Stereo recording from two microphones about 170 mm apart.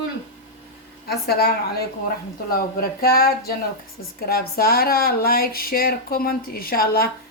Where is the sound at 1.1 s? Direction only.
70° left (ahead or behind).